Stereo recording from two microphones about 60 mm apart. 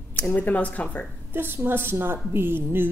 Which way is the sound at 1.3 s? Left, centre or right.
Right.